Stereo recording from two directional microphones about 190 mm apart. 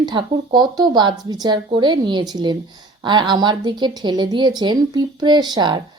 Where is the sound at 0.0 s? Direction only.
25° right (ahead or behind).